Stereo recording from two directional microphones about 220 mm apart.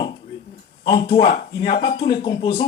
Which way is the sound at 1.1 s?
15° left (ahead or behind).